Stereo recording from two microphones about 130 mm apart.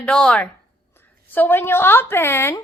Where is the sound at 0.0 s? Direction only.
5° left (ahead or behind).